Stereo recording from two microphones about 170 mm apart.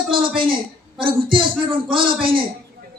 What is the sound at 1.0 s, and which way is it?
Speech, 30° right (ahead or behind).